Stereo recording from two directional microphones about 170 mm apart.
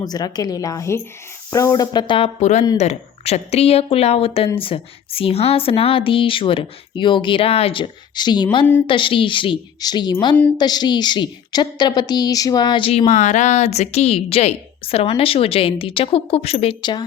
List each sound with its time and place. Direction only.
0.0 s a woman's voice: 25° left (ahead or behind)